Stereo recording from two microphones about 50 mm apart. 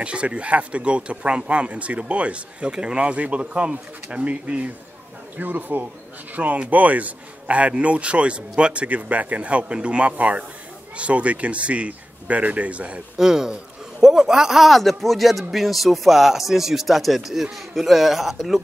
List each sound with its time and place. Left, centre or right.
0.0 s a man's voice: right
5.4 s a man's voice: right
13.2 s a man's voice: centre